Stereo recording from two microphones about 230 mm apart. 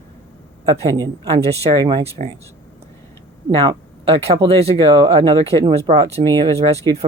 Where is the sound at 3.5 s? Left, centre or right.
Right.